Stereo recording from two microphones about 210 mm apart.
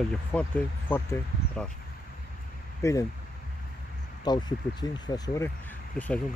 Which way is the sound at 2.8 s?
15° left (ahead or behind).